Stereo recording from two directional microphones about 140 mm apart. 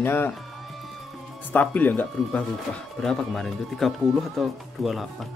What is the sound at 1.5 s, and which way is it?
Speech, 10° left (ahead or behind).